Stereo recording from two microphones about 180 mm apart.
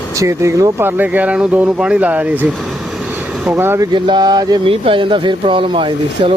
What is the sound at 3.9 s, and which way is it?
Speech, 25° right (ahead or behind).